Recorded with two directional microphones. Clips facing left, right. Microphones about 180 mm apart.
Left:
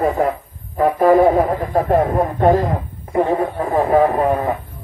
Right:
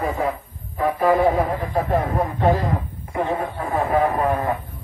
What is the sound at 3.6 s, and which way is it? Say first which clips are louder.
Speech: left 5 dB; 35° left (ahead or behind).